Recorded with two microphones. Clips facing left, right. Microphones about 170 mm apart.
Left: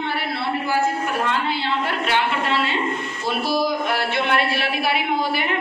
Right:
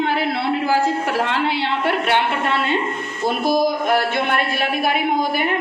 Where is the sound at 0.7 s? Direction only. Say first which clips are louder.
Right 1 dB; 85° right.